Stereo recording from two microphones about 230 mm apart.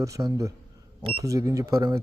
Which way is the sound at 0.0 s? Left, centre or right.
Centre.